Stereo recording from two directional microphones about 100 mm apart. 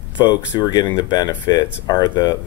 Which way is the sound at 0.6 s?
45° left (ahead or behind).